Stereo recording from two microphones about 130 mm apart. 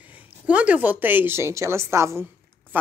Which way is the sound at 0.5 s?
10° right (ahead or behind).